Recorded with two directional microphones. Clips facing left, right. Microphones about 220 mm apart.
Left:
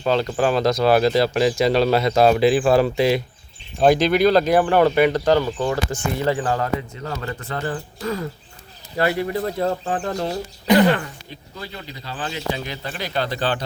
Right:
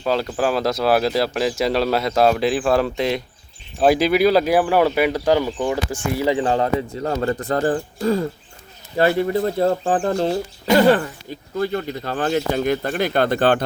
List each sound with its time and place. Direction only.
0.0 s speech: 5° right (ahead or behind); by 10.3 s 30° right (ahead or behind)
11.6 s speech: 50° right (ahead or behind)